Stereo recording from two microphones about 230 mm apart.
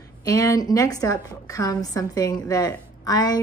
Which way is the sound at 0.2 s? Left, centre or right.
Centre.